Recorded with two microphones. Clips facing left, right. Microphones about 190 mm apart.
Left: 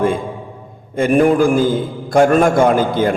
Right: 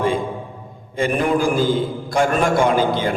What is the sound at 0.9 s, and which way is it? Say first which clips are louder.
A man's voice: left 6 dB; 50° left (ahead or behind).